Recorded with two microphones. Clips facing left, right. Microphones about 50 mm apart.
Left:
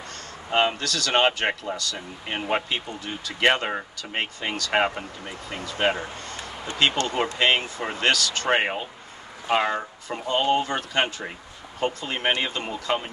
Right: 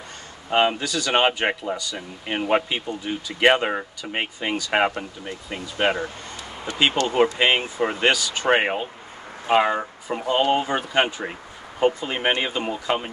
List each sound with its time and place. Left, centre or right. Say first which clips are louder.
0.5 s speech: right 2 dB; centre
7.0 s speech: right 3 dB; left
7.3 s speech: right 2 dB; centre